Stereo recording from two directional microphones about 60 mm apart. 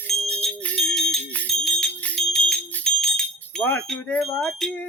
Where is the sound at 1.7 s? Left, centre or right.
Left.